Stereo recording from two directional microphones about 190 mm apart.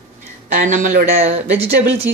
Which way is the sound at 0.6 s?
40° right (ahead or behind).